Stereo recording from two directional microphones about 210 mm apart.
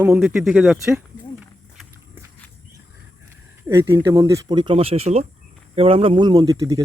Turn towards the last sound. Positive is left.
turn(degrees=-15)  # may be behind; listen again after turning